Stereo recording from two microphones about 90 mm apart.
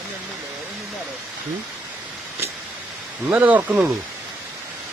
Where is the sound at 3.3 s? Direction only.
20° right (ahead or behind).